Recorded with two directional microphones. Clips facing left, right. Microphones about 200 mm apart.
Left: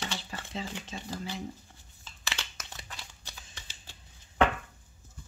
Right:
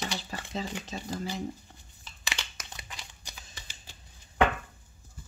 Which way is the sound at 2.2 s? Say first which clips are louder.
Right 1 dB; 15° right (ahead or behind).